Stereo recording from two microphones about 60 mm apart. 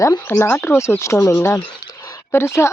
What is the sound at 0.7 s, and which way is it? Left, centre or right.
Speech, left.